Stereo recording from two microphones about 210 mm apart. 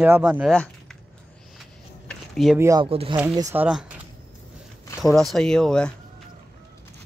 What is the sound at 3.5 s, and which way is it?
Speech, 5° right (ahead or behind).